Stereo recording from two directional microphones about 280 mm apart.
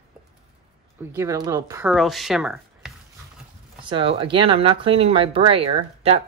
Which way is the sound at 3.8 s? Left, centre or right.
Centre.